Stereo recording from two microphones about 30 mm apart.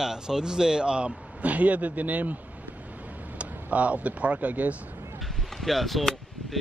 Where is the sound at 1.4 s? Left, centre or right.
Right.